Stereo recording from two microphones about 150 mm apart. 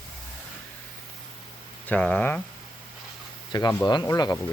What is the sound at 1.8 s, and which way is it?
Speech, 10° left (ahead or behind).